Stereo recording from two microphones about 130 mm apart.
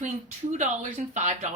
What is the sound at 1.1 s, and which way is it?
Speech, 65° right (ahead or behind).